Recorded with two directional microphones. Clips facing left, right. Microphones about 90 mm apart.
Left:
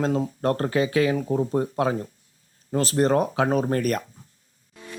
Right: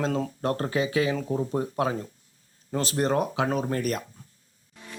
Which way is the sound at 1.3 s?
35° left (ahead or behind).